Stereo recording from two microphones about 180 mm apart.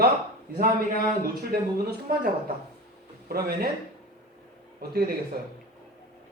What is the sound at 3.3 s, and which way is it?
Speech, 60° right (ahead or behind).